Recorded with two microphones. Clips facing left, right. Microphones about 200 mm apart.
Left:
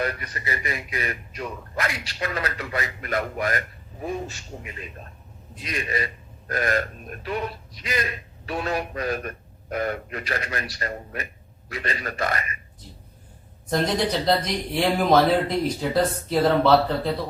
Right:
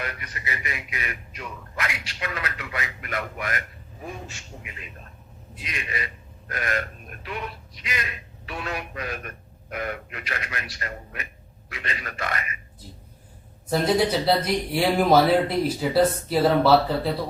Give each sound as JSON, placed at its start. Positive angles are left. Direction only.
{"t": 0.0, "sound": "speech", "side_deg": 35}
{"t": 13.7, "sound": "speech", "side_deg": -5}